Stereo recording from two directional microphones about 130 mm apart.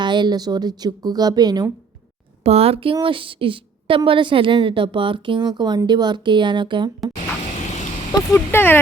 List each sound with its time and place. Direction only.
0.0 s a woman's voice: 35° right (ahead or behind)
2.4 s a woman's voice: 50° right (ahead or behind)
8.3 s speech: 15° left (ahead or behind)